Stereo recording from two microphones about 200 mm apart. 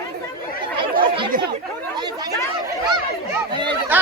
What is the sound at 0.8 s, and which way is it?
Chatter, 25° right (ahead or behind).